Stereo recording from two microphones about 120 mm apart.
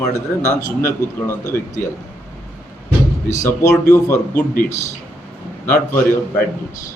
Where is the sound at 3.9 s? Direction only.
20° left (ahead or behind).